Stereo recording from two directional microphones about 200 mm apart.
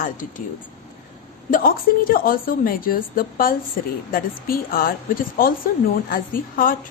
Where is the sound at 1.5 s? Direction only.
45° left (ahead or behind).